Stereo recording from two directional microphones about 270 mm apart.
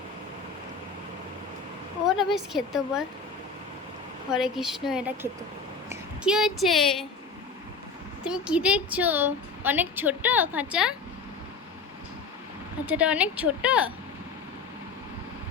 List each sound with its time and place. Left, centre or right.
2.0 s a woman's voice: centre
4.3 s a woman's voice: centre
8.2 s a woman's voice: centre
12.8 s a woman's voice: centre